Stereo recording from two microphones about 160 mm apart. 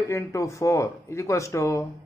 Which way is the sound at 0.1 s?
20° left (ahead or behind).